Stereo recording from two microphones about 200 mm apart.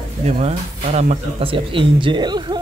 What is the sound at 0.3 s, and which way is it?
A man's voice, 35° right (ahead or behind).